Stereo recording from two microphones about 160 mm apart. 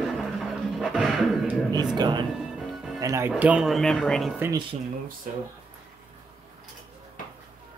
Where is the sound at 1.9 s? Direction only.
25° right (ahead or behind).